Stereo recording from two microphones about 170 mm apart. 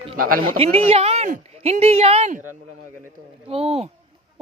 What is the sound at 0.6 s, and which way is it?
Speech, 35° right (ahead or behind).